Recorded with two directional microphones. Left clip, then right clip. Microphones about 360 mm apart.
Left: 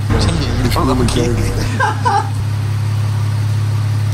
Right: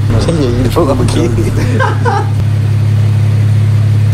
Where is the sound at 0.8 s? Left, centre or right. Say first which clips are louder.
Right 4 dB; centre.